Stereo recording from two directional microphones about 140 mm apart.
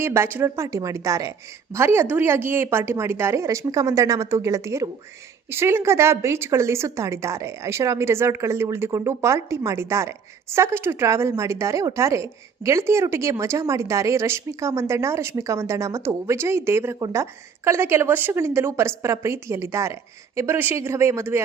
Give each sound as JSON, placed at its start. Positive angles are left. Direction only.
{"t": 0.0, "sound": "a woman's voice", "side_deg": -20}